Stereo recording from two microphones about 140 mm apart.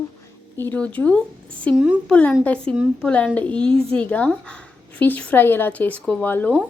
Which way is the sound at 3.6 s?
40° right (ahead or behind).